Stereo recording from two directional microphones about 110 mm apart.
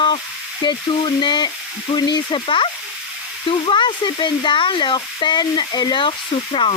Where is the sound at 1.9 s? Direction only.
40° left (ahead or behind).